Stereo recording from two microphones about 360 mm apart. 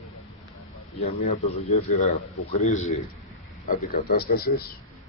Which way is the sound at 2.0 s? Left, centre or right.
Centre.